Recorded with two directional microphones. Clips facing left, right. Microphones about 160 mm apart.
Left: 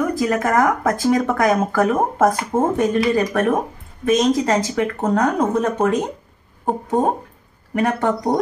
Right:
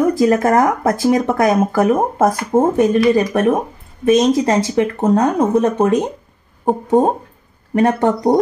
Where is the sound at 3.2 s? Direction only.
20° right (ahead or behind).